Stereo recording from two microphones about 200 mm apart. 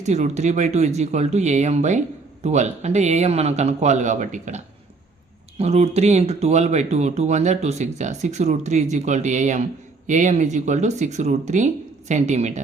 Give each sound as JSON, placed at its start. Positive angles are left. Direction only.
{"t": 0.0, "sound": "speech", "side_deg": -35}